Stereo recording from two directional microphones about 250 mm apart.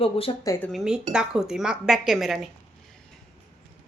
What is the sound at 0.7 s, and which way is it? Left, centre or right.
Speech, centre.